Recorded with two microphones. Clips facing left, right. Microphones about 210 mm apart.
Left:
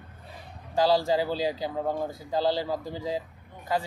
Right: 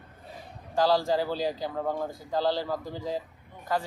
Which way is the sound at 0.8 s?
10° left (ahead or behind).